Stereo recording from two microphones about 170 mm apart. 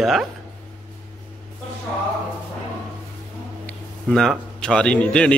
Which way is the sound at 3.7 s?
Centre (ahead or behind).